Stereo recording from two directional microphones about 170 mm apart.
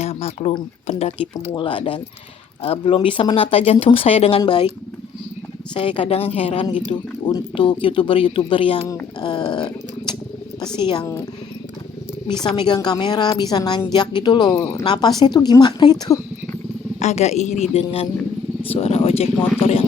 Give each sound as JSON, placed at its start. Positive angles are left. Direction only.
{"t": 0.0, "sound": "a sound", "side_deg": 35}
{"t": 0.5, "sound": "speech", "side_deg": 35}
{"t": 5.7, "sound": "speech", "side_deg": 30}
{"t": 10.6, "sound": "speech", "side_deg": 25}
{"t": 12.5, "sound": "speech", "side_deg": 25}
{"t": 17.0, "sound": "speech", "side_deg": 40}